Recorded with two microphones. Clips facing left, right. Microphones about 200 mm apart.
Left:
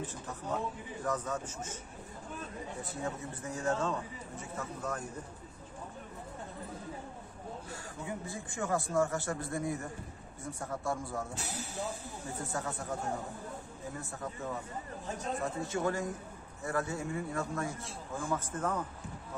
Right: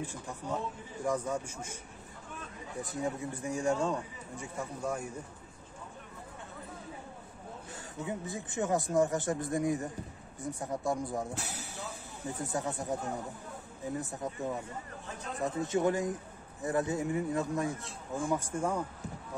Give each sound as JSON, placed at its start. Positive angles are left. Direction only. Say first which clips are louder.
{"t": 0.0, "sound": "a man's voice", "louder": "right 1 dB", "side_deg": -10}
{"t": 2.8, "sound": "a man's voice", "louder": "right 5 dB", "side_deg": -15}
{"t": 7.7, "sound": "a man's voice", "louder": "right 5 dB", "side_deg": -20}
{"t": 11.3, "sound": "speech", "louder": "even", "side_deg": -60}
{"t": 12.4, "sound": "a man's voice", "louder": "right 3 dB", "side_deg": -15}
{"t": 15.6, "sound": "a man's voice", "louder": "right 6 dB", "side_deg": -20}